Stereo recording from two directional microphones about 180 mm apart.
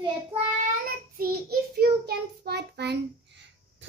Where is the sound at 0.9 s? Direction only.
55° right (ahead or behind).